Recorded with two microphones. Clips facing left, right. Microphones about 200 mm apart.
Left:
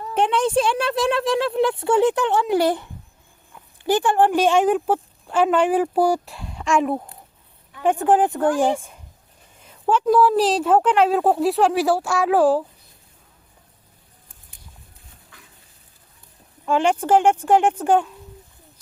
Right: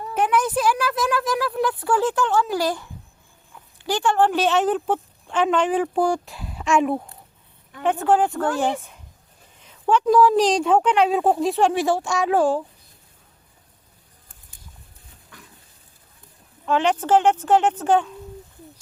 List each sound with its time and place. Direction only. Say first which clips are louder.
0.1 s speech: left 2 dB; 30° left (ahead or behind)
3.9 s speech: left 2 dB; 15° left (ahead or behind); by 7.0 s centre (ahead or behind)
7.8 s a woman's voice: left 2 dB; 15° left (ahead or behind)
16.6 s speech: left 1 dB; 10° left (ahead or behind)